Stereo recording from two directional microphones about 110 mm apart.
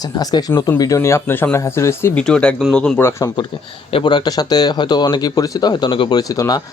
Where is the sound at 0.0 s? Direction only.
35° left (ahead or behind).